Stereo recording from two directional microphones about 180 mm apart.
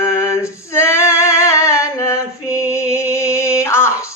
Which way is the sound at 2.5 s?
15° left (ahead or behind).